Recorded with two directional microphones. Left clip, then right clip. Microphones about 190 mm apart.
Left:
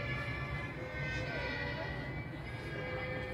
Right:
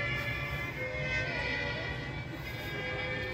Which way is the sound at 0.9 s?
70° left (ahead or behind).